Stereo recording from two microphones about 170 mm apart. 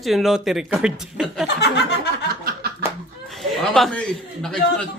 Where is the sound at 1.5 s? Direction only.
80° left.